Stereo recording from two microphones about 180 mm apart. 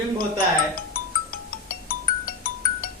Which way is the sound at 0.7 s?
55° left (ahead or behind).